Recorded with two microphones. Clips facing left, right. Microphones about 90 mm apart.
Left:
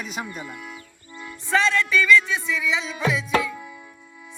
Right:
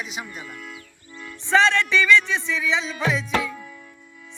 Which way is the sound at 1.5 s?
25° right (ahead or behind).